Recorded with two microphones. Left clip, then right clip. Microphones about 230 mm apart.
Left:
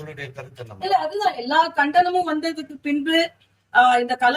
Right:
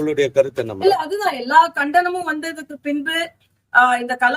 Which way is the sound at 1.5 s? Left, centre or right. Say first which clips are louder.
Right 6 dB; centre.